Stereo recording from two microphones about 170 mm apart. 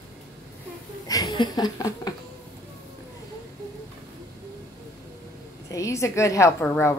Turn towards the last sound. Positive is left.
turn(degrees=15)  # may be behind; listen again after turning